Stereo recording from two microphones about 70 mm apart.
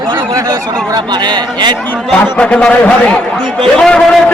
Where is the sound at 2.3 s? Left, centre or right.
Centre.